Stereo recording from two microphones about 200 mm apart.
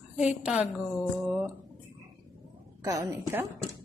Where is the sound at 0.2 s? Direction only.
5° right (ahead or behind).